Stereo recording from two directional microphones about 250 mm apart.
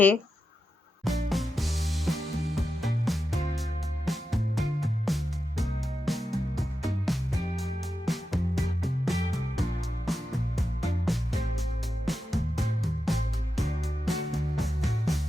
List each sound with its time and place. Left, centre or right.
1.0 s music: centre